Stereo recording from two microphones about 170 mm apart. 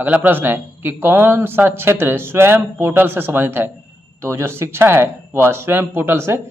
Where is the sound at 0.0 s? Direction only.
10° right (ahead or behind).